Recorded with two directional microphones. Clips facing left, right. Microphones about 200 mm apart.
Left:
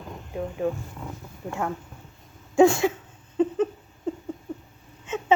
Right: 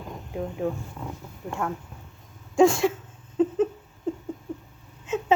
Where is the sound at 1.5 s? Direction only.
5° left (ahead or behind).